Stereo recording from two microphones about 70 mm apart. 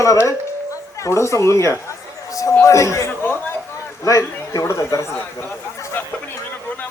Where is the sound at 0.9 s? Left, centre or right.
Left.